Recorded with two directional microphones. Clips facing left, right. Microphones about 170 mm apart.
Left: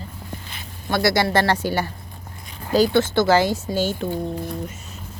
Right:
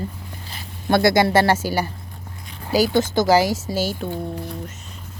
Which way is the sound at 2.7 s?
10° right (ahead or behind).